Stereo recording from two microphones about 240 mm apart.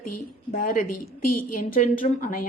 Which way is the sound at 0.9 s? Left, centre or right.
Left.